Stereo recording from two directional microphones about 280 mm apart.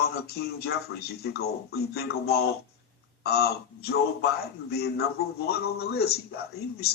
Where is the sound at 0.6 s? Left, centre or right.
Left.